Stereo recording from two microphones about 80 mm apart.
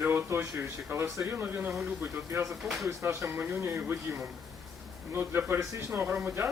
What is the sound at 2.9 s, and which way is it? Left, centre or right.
Speech, right.